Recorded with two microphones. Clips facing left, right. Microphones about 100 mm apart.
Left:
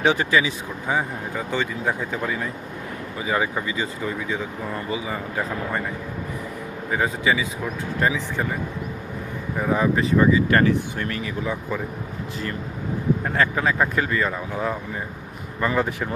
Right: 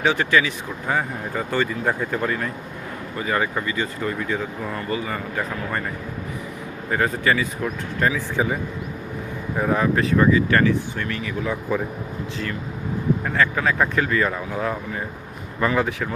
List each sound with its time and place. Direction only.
0.0 s speech: 20° left (ahead or behind)
0.9 s speech: 5° left (ahead or behind)
6.9 s speech: 5° left (ahead or behind)
8.4 s speech: 5° right (ahead or behind)
9.6 s speech: 5° left (ahead or behind)
10.5 s speech: 30° left (ahead or behind)
11.7 s speech: 10° right (ahead or behind)
13.2 s speech: 20° left (ahead or behind)
13.7 s speech: 5° left (ahead or behind)